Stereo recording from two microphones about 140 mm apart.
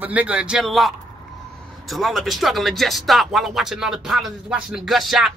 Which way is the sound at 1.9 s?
Centre (ahead or behind).